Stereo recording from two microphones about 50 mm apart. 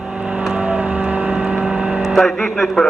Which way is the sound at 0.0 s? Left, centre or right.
Centre.